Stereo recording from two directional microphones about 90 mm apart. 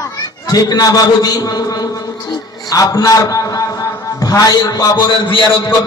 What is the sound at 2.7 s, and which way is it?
A man's voice, 40° left (ahead or behind).